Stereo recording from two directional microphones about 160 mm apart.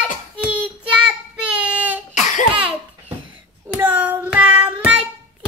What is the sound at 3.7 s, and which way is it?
Child singing, 10° right (ahead or behind).